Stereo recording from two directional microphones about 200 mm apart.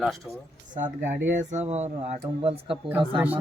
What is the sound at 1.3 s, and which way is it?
Speech, 35° right (ahead or behind).